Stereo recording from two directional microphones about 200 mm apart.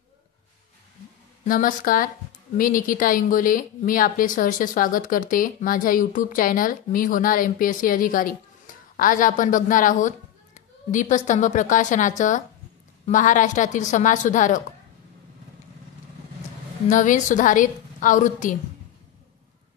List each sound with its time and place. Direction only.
1.4 s a woman's voice: 40° left (ahead or behind)
16.9 s a woman's voice: 40° left (ahead or behind)